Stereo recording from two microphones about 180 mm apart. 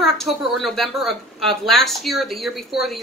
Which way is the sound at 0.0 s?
Centre (ahead or behind).